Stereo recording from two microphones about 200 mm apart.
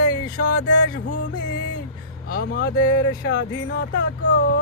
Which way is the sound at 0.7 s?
65° left (ahead or behind).